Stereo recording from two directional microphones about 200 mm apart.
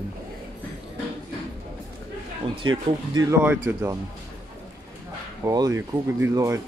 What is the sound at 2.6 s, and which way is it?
Speech, 20° right (ahead or behind).